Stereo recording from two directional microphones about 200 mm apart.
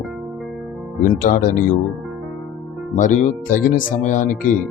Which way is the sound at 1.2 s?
40° left (ahead or behind).